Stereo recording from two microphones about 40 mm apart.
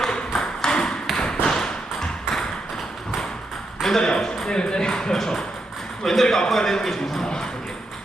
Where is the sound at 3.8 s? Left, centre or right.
Centre.